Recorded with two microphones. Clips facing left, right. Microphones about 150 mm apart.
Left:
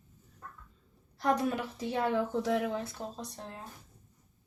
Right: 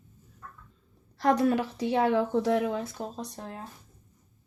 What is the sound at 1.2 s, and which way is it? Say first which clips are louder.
A woman's voice: right 6 dB; 80° right.